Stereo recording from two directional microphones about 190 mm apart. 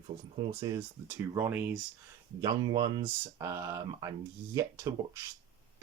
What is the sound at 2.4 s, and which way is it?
Speech, 20° right (ahead or behind).